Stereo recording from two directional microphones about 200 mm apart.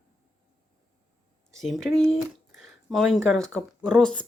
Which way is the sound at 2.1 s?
Centre (ahead or behind).